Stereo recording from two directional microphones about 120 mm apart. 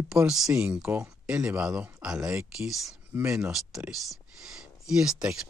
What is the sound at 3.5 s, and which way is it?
Speech, 5° right (ahead or behind).